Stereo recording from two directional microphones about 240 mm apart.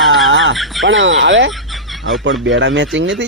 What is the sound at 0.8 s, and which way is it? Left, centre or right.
Speech, right.